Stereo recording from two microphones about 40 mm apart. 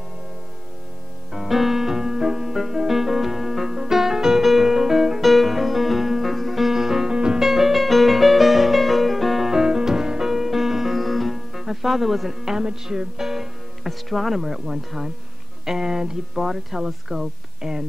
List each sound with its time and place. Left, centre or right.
1.3 s music: centre
9.5 s music: centre
12.5 s speech: centre